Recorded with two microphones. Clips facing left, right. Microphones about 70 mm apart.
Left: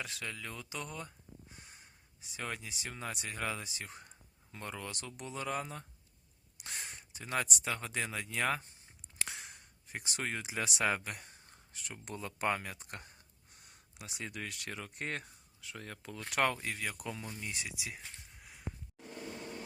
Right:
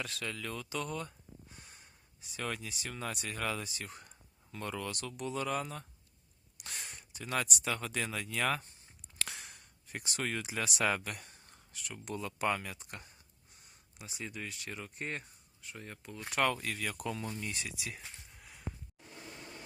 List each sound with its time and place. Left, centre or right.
0.0 s speech: centre
2.3 s speech: centre; by 13.1 s left
13.5 s speech: left
16.6 s speech: centre